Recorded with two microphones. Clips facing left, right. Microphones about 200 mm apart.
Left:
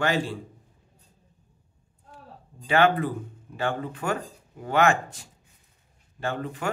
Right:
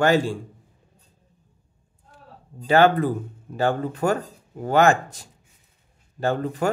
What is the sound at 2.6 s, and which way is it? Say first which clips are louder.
Speech: right 4 dB; 40° right (ahead or behind).